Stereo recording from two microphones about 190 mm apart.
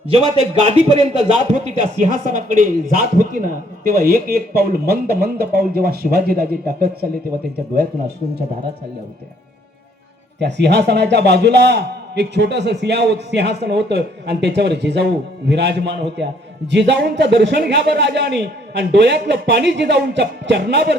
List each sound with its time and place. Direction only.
0.5 s a man's voice: 35° right (ahead or behind); by 6.9 s 50° right (ahead or behind)
10.4 s a man's voice: 65° right (ahead or behind)